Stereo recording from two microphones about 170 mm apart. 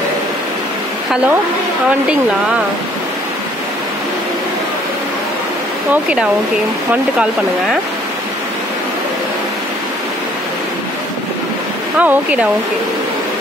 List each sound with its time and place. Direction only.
12.0 s speech: 10° right (ahead or behind)